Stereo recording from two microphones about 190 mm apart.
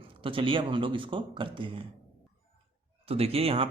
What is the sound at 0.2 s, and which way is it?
Speech, 30° right (ahead or behind).